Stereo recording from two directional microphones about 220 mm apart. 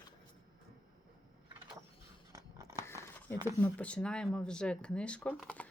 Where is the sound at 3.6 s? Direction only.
5° left (ahead or behind).